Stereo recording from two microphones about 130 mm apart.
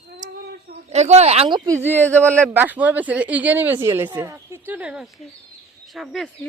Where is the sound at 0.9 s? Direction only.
55° right (ahead or behind).